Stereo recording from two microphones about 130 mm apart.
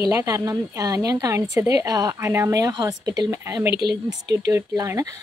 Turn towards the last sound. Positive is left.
turn(degrees=-25)  # may be behind; listen again after turning